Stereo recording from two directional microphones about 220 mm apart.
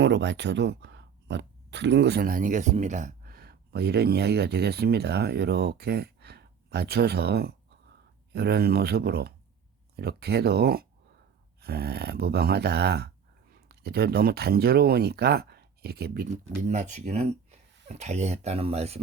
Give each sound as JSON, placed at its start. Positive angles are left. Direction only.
{"t": 0.0, "sound": "speech", "side_deg": -55}